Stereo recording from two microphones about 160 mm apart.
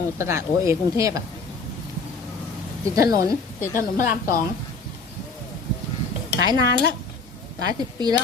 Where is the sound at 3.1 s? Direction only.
20° right (ahead or behind).